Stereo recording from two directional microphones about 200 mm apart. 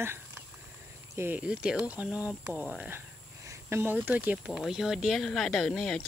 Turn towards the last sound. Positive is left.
turn(degrees=5)  # may be behind; listen again after turning